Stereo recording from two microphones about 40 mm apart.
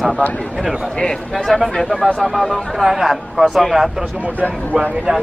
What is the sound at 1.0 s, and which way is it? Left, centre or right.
Speech, centre.